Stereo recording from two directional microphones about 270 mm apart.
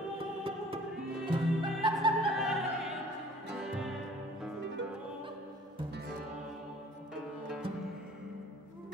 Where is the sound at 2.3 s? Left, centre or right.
Centre.